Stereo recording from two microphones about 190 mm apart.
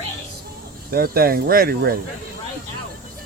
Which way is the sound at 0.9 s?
55° right (ahead or behind).